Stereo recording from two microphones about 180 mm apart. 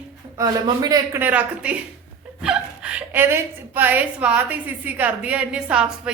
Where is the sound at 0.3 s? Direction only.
20° right (ahead or behind).